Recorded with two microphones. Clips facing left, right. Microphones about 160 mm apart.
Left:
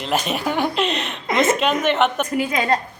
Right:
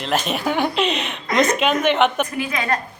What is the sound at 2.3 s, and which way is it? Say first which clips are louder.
Speech: left 3 dB; 25° left (ahead or behind).